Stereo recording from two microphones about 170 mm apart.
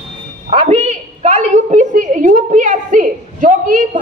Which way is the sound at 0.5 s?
35° right (ahead or behind).